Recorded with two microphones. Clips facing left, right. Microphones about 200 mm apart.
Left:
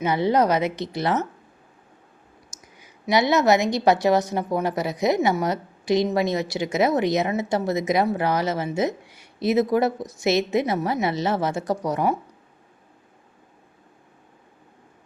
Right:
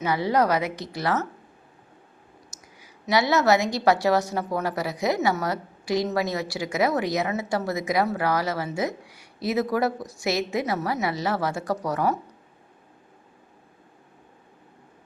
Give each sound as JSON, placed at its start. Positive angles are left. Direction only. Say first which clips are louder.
{"t": 0.0, "sound": "a woman's voice", "louder": "left 3 dB", "side_deg": 20}
{"t": 2.5, "sound": "a woman's voice", "louder": "even", "side_deg": 20}